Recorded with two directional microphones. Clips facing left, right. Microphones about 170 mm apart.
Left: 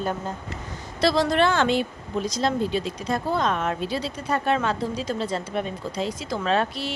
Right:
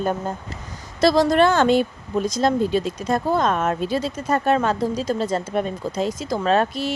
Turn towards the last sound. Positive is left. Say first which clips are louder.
# right 4 dB
turn(degrees=-45)  # may be behind; listen again after turning